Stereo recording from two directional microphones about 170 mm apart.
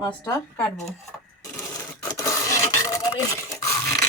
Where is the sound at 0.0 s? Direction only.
20° left (ahead or behind).